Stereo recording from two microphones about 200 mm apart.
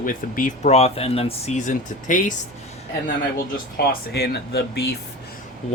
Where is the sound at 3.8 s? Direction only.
50° left (ahead or behind).